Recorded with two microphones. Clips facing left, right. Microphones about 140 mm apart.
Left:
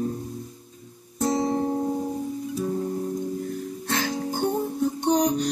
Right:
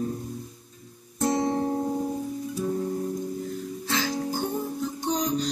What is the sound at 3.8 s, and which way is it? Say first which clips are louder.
Music: left 1 dB; 55° left (ahead or behind).